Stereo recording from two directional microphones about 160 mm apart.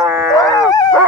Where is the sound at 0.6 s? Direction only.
20° left (ahead or behind).